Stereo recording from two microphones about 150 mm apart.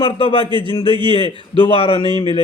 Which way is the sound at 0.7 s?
35° left (ahead or behind).